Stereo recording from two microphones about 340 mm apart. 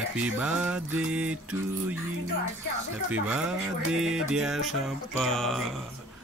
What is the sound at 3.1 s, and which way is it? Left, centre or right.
Mantra, centre.